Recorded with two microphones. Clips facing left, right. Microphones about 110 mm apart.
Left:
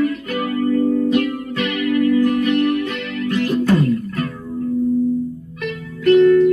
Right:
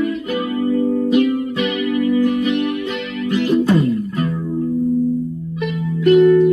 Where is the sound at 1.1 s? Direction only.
10° right (ahead or behind).